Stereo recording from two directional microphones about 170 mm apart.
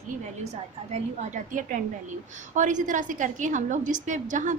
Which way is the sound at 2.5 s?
45° right (ahead or behind).